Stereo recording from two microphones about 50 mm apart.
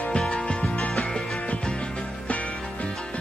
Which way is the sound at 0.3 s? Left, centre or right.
Left.